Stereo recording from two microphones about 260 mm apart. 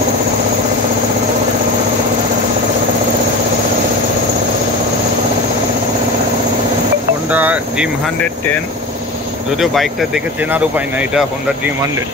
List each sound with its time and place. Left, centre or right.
7.2 s vehicle: centre
9.6 s speech: centre